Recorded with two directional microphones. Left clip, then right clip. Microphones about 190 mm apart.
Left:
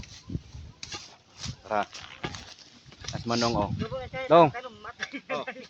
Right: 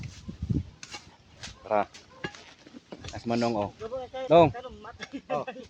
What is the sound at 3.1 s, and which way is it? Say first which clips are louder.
Speech: left 1 dB; 5° right (ahead or behind).